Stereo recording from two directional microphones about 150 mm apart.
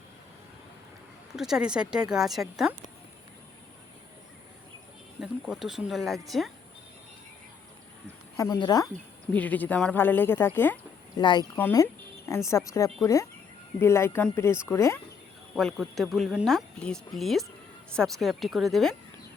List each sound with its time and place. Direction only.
1.4 s speech: 5° right (ahead or behind)
5.2 s speech: 5° right (ahead or behind)
8.4 s speech: 25° left (ahead or behind)
9.3 s speech: 10° left (ahead or behind)
11.2 s speech: 30° left (ahead or behind)
11.5 s a sound: 15° left (ahead or behind)
12.5 s speech: 20° left (ahead or behind)
15.5 s speech: centre (ahead or behind)